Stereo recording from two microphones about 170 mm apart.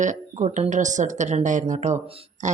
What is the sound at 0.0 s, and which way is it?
Speech, 45° right (ahead or behind).